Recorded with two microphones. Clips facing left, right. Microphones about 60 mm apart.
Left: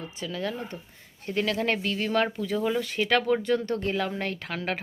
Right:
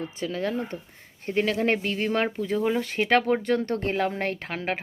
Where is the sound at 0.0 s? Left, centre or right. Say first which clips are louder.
Right 3 dB; right.